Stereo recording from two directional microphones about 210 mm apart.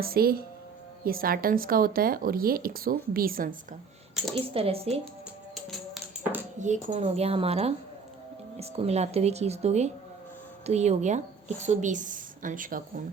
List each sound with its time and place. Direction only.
0.0 s speech: 45° right (ahead or behind)
4.4 s a woman's voice: 25° right (ahead or behind)
5.5 s music: centre (ahead or behind)
6.6 s a woman's voice: 35° right (ahead or behind)